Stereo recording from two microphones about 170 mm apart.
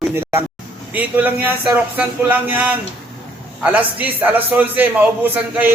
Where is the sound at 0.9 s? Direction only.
10° right (ahead or behind).